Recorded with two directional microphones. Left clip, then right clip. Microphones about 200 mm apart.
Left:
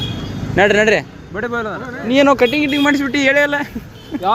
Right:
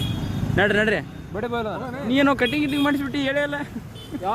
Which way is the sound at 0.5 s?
Centre (ahead or behind).